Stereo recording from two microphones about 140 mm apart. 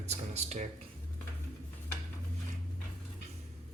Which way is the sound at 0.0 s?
50° right (ahead or behind).